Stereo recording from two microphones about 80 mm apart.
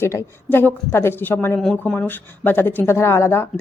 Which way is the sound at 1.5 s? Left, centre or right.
Centre.